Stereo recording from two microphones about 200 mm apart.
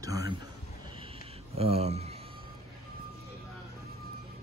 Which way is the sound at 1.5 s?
30° right (ahead or behind).